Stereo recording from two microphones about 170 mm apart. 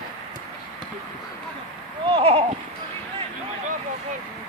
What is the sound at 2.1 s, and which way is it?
Horse, 35° right (ahead or behind).